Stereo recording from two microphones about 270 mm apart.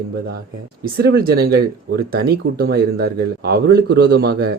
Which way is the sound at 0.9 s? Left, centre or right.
Right.